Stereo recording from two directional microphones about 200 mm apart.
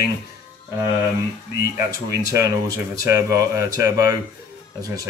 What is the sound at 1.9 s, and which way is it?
Speech, 15° right (ahead or behind).